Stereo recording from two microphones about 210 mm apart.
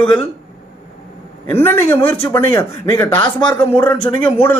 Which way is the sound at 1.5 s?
10° left (ahead or behind).